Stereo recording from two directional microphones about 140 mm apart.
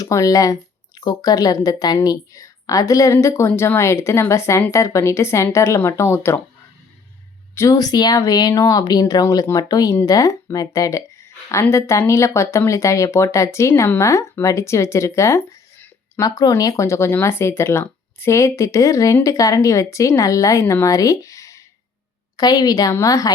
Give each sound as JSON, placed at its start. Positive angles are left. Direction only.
{"t": 0.0, "sound": "speech", "side_deg": 25}
{"t": 7.5, "sound": "speech", "side_deg": 20}